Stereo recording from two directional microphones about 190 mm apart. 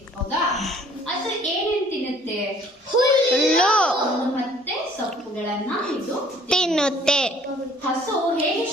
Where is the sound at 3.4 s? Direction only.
5° left (ahead or behind).